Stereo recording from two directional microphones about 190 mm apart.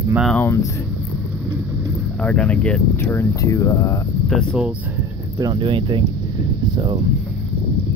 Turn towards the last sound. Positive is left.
turn(degrees=-25)  # may be behind; listen again after turning